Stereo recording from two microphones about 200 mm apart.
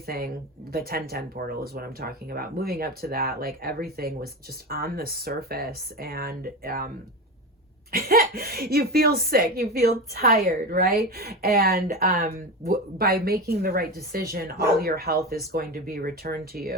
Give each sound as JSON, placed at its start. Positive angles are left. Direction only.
{"t": 0.0, "sound": "speech", "side_deg": -50}
{"t": 7.9, "sound": "speech", "side_deg": -50}